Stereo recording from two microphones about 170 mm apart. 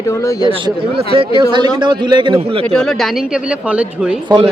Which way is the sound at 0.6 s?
30° right (ahead or behind).